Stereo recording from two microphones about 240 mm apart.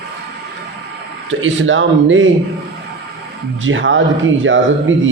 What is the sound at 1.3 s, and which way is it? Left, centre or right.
Speech, right.